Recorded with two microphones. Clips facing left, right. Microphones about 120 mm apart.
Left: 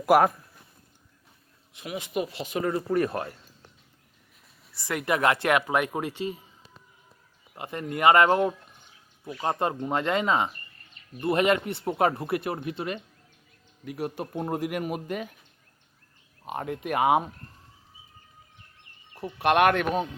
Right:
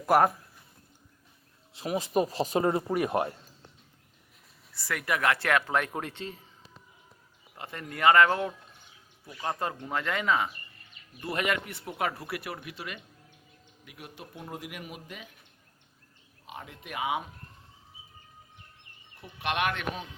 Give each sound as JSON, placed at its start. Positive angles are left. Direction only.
{"t": 0.0, "sound": "speech", "side_deg": 5}
{"t": 1.7, "sound": "speech", "side_deg": -35}
{"t": 2.9, "sound": "speech", "side_deg": -15}
{"t": 4.7, "sound": "speech", "side_deg": 20}
{"t": 7.5, "sound": "speech", "side_deg": 20}
{"t": 13.8, "sound": "speech", "side_deg": 45}
{"t": 16.5, "sound": "speech", "side_deg": 55}
{"t": 19.1, "sound": "speech", "side_deg": 45}